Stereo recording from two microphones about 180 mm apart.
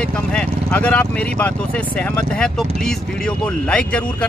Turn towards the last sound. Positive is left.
turn(degrees=5)  # may be behind; listen again after turning